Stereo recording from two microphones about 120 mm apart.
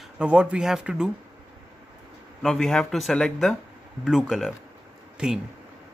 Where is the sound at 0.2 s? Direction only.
10° right (ahead or behind).